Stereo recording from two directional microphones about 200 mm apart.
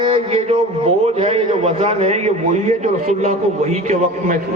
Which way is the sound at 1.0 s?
30° right (ahead or behind).